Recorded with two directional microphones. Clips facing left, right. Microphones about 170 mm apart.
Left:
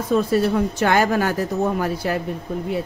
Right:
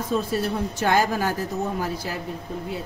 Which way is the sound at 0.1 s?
70° left (ahead or behind).